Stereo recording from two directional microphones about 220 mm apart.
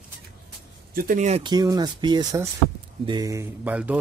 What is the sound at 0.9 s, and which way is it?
Speech, 35° right (ahead or behind).